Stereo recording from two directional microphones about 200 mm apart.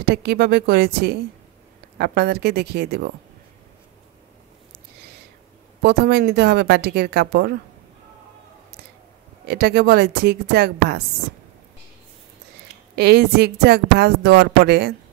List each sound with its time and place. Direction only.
0.0 s a woman's voice: 55° right (ahead or behind)
5.8 s a woman's voice: 55° right (ahead or behind)
9.5 s a woman's voice: 50° right (ahead or behind)
12.9 s a woman's voice: 55° right (ahead or behind)